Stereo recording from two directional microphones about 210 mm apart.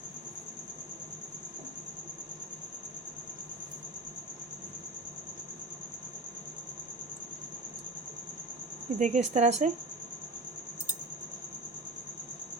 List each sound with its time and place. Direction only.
9.0 s speech: 35° right (ahead or behind)